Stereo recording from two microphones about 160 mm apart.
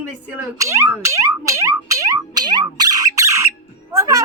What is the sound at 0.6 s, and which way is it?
Music, 15° right (ahead or behind).